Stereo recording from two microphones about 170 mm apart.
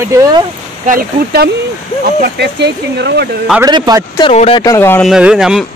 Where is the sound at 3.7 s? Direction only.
25° right (ahead or behind).